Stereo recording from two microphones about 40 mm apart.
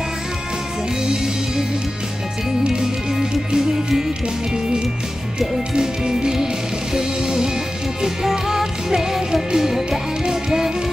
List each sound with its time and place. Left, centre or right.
2.7 s music: centre
5.8 s music: centre